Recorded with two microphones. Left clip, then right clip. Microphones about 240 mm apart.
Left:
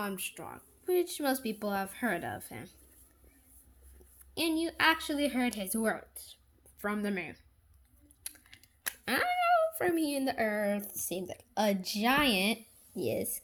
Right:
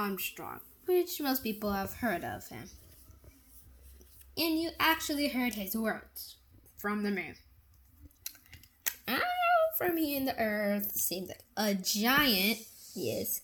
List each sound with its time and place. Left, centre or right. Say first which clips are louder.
0.0 s speech: right 2 dB; centre
4.4 s speech: left 1 dB; centre
8.2 s speech: right 2 dB; centre